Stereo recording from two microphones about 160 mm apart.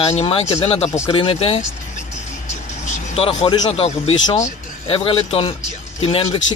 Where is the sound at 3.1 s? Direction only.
35° left (ahead or behind).